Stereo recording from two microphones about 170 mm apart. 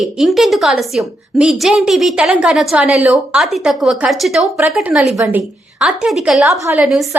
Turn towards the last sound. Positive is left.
turn(degrees=0)  # may be behind; listen again after turning